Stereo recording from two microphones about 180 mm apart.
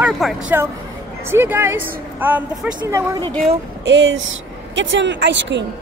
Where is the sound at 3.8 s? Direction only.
85° right.